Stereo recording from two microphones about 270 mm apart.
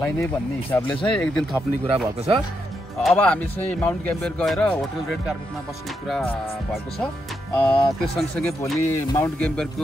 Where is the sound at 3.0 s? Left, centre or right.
Centre.